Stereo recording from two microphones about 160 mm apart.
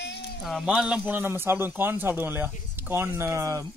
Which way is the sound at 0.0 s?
90° left.